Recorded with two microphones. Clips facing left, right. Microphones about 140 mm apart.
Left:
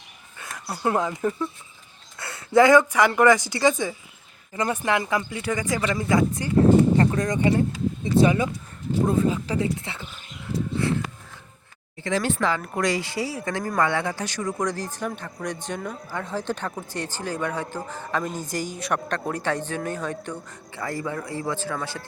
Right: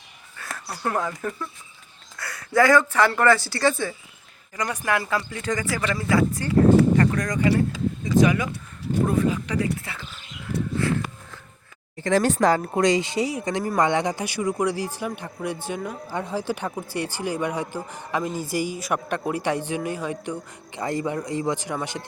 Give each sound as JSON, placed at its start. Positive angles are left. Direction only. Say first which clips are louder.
{"t": 0.5, "sound": "speech", "louder": "left 3 dB", "side_deg": 15}
{"t": 4.5, "sound": "speech", "louder": "left 2 dB", "side_deg": 25}
{"t": 6.9, "sound": "a sound", "louder": "even", "side_deg": 25}
{"t": 8.0, "sound": "speech", "louder": "even", "side_deg": 30}
{"t": 10.5, "sound": "a sound", "louder": "even", "side_deg": -65}
{"t": 12.0, "sound": "speech", "louder": "right 5 dB", "side_deg": -45}
{"t": 12.7, "sound": "speech", "louder": "right 4 dB", "side_deg": -20}